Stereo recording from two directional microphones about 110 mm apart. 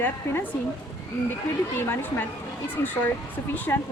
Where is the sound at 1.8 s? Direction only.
20° left (ahead or behind).